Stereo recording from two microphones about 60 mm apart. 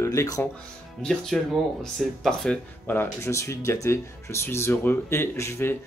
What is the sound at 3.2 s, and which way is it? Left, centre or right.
Speech, left.